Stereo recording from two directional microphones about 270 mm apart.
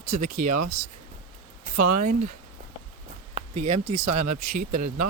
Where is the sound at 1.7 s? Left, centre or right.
Right.